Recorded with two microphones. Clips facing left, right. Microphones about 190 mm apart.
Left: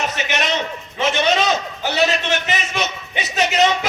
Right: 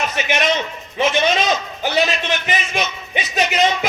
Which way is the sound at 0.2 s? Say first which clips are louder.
Right 6 dB; 15° right (ahead or behind).